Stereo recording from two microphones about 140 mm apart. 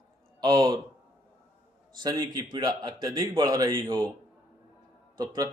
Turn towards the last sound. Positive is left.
turn(degrees=-30)  # may be behind; listen again after turning